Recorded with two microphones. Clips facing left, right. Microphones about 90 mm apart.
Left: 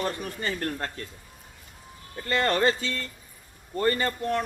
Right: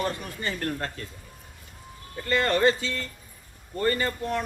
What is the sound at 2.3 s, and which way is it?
Speech, 20° left (ahead or behind).